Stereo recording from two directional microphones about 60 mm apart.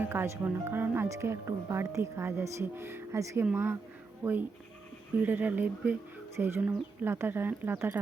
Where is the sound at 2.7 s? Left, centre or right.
Right.